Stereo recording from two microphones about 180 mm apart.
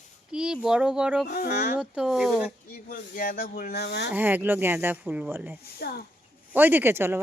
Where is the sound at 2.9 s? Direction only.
50° left (ahead or behind); by 4.1 s 65° left (ahead or behind).